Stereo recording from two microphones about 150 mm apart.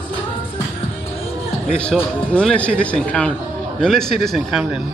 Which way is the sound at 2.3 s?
10° left (ahead or behind).